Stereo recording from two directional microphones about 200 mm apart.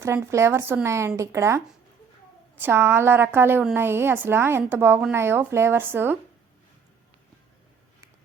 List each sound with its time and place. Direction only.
0.0 s a woman's voice: 15° right (ahead or behind)